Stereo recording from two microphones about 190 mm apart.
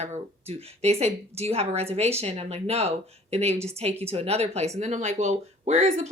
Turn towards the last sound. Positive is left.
turn(degrees=-40)  # may be behind; listen again after turning